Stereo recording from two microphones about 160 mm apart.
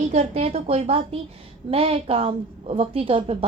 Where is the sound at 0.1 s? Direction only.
40° right (ahead or behind).